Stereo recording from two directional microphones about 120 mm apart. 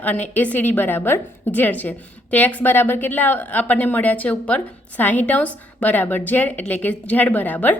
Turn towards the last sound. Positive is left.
turn(degrees=15)  # may be behind; listen again after turning